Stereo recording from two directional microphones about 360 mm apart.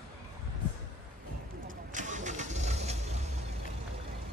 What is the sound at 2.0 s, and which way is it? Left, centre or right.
Vehicle, centre.